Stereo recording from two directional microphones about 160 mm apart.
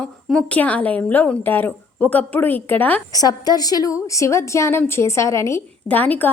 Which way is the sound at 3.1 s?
25° left (ahead or behind).